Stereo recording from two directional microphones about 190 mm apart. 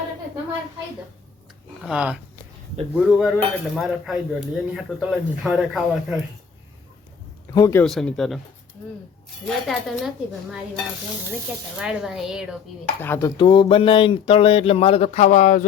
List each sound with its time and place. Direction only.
1.8 s speech: 5° right (ahead or behind)
7.5 s speech: 15° left (ahead or behind)
7.9 s speech: centre (ahead or behind)
9.5 s speech: centre (ahead or behind)
11.8 s speech: 5° right (ahead or behind)
13.0 s speech: 10° left (ahead or behind); by 15.6 s 40° left (ahead or behind)